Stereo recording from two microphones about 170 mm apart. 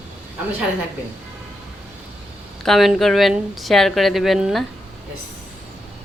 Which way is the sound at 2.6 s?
Centre (ahead or behind).